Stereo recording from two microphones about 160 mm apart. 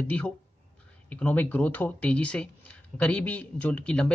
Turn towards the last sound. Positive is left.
turn(degrees=5)  # may be behind; listen again after turning